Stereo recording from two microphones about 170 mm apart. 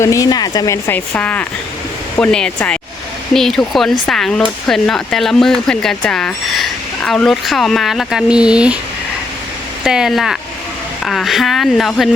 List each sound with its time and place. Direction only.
0.0 s a woman's voice: 20° left (ahead or behind); by 8.8 s 5° right (ahead or behind)
9.8 s speech: 5° right (ahead or behind)